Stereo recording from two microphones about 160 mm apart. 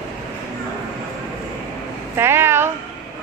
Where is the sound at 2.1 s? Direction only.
15° right (ahead or behind).